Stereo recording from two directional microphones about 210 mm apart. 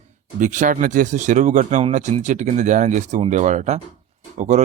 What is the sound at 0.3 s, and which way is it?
Speech, 35° right (ahead or behind).